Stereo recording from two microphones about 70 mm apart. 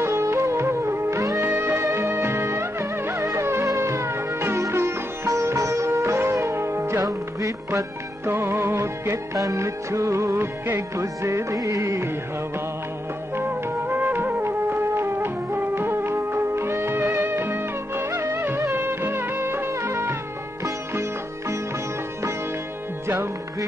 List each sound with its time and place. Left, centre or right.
0.0 s music: right
1.4 s music: right
3.6 s sitar: right
8.3 s music: right
13.4 s music: right